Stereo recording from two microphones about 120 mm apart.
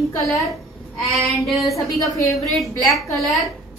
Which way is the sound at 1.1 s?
Centre (ahead or behind).